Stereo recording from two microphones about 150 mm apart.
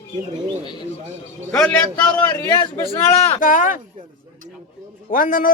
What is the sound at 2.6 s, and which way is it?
Speech, 35° left (ahead or behind).